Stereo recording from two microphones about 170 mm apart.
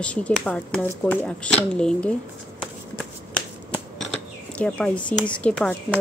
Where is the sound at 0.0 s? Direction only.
5° left (ahead or behind).